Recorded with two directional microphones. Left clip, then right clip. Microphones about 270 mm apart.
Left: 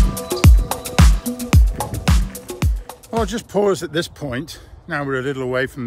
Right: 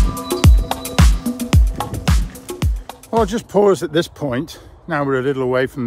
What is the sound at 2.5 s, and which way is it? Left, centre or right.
Speech, centre.